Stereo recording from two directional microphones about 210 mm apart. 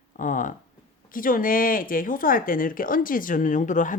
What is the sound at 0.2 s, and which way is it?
Speech, 40° left (ahead or behind).